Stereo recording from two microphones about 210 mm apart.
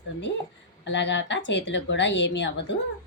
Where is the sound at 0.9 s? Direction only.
60° left (ahead or behind).